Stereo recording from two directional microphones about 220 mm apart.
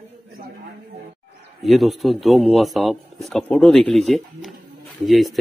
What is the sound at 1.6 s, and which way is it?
A man's voice, centre (ahead or behind).